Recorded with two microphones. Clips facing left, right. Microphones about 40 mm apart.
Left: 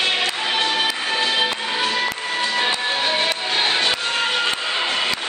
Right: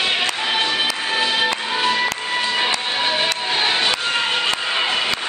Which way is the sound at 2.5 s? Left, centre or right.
Centre.